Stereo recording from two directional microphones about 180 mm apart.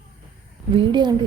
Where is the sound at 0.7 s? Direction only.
25° right (ahead or behind).